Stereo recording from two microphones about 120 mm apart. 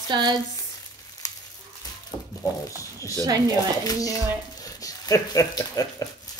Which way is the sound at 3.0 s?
30° right (ahead or behind).